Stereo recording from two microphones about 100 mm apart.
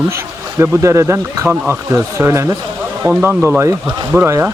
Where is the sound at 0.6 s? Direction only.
25° right (ahead or behind).